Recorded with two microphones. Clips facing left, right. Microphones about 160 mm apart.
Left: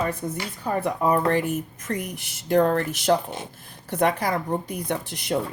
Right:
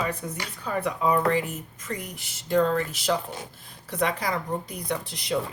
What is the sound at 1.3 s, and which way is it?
Speech, 65° left (ahead or behind).